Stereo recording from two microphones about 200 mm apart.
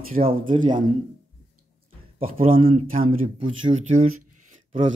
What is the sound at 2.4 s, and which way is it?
Speech, 45° right (ahead or behind).